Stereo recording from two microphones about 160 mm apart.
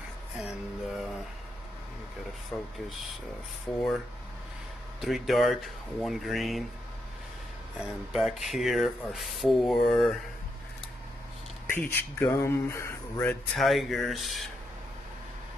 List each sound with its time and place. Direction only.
0.4 s music: centre (ahead or behind)
2.5 s speech: 10° left (ahead or behind)
5.0 s speech: centre (ahead or behind)
7.8 s speech: centre (ahead or behind)
11.7 s speech: 10° left (ahead or behind)
13.6 s speech: centre (ahead or behind)